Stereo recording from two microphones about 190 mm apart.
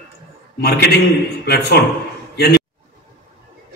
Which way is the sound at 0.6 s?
60° left (ahead or behind).